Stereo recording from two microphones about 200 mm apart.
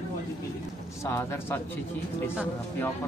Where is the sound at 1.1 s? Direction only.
10° left (ahead or behind).